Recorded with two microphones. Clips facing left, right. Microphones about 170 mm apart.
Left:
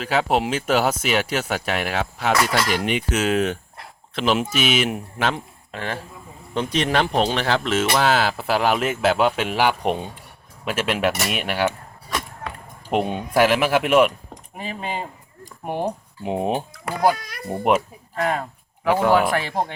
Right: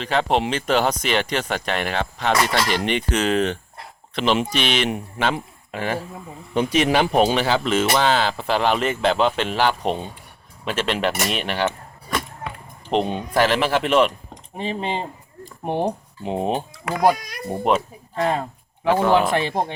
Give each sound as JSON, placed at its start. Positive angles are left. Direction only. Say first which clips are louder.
{"t": 0.0, "sound": "speech", "louder": "even", "side_deg": 5}
{"t": 12.9, "sound": "speech", "louder": "even", "side_deg": 10}
{"t": 14.5, "sound": "speech", "louder": "right 4 dB", "side_deg": -25}
{"t": 16.2, "sound": "speech", "louder": "even", "side_deg": 10}
{"t": 16.7, "sound": "speech", "louder": "right 3 dB", "side_deg": -15}
{"t": 17.6, "sound": "speech", "louder": "left 1 dB", "side_deg": 10}
{"t": 18.2, "sound": "speech", "louder": "right 2 dB", "side_deg": -25}